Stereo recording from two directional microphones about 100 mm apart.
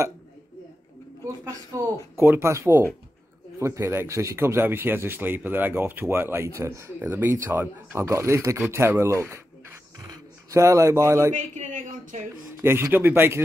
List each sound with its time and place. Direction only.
1.7 s a man's voice: 30° right (ahead or behind)
12.6 s a man's voice: 25° right (ahead or behind)